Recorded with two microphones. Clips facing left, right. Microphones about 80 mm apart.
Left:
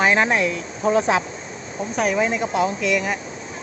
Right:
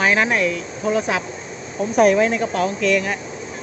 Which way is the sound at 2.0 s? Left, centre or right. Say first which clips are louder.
Right 7 dB; centre.